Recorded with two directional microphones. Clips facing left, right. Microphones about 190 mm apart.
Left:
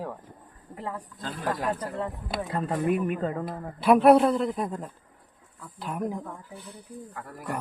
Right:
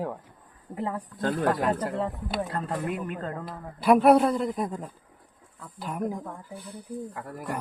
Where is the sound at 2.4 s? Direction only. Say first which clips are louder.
Left 4 dB; 5° left (ahead or behind).